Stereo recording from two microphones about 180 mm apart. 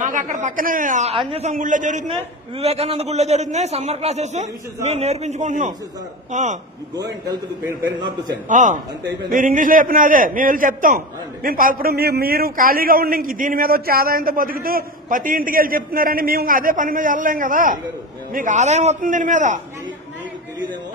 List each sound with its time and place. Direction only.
0.0 s a man's voice: 45° right (ahead or behind)
2.0 s a man's voice: 35° right (ahead or behind)
8.0 s a man's voice: 25° right (ahead or behind)
8.5 s a man's voice: 45° right (ahead or behind)